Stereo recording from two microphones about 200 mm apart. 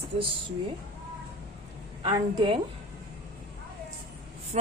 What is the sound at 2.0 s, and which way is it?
Speech, 20° right (ahead or behind).